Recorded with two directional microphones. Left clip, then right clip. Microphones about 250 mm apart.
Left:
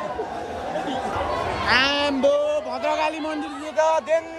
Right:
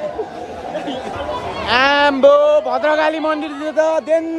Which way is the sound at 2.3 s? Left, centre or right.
Right.